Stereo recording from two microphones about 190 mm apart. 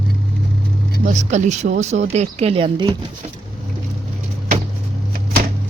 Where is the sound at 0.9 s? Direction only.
40° right (ahead or behind); by 2.9 s 25° right (ahead or behind).